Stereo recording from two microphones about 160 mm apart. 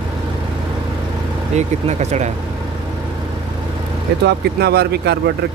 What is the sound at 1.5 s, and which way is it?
Speech, 45° right (ahead or behind).